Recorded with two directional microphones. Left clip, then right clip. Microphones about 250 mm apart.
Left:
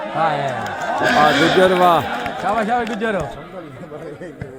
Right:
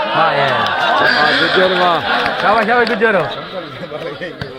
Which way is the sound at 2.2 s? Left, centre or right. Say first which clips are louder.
Right 7 dB; right.